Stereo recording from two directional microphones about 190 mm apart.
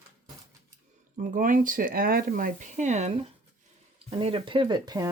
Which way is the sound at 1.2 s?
40° right (ahead or behind).